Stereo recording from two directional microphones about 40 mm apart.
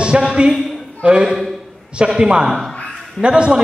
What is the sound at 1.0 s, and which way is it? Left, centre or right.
A man's voice, right.